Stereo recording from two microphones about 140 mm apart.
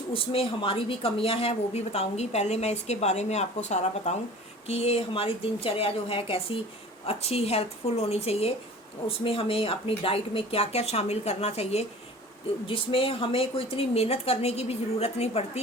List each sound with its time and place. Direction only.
0.1 s speech: 40° left (ahead or behind)